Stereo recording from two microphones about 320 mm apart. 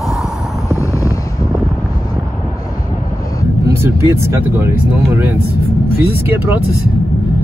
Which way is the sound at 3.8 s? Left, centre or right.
Centre.